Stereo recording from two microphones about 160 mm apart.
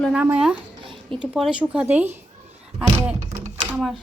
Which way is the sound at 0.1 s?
5° right (ahead or behind).